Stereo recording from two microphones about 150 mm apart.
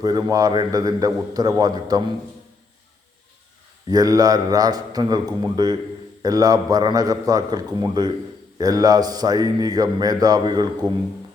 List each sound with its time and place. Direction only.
0.0 s speech: 25° right (ahead or behind)
3.8 s speech: 25° right (ahead or behind)